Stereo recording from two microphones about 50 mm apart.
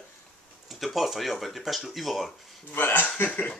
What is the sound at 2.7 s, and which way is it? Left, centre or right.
Speech, left.